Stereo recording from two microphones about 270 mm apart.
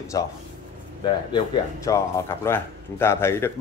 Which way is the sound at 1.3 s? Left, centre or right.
Centre.